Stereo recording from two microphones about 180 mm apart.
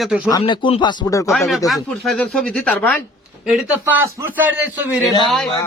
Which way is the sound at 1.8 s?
Centre (ahead or behind).